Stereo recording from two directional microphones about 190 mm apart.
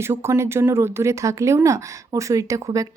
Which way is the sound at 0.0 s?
15° right (ahead or behind).